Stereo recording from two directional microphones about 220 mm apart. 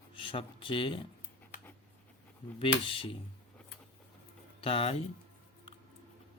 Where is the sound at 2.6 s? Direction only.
25° left (ahead or behind).